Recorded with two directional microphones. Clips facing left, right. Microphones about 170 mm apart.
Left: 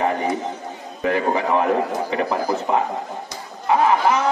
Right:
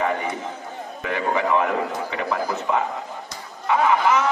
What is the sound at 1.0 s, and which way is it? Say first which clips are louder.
A man's voice: left 3 dB; 35° left (ahead or behind).